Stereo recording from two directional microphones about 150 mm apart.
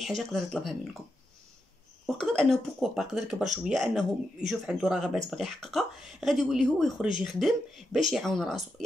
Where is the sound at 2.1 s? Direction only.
5° left (ahead or behind).